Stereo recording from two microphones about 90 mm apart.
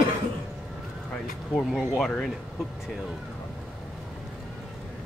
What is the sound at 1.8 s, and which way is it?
Speech, 5° left (ahead or behind).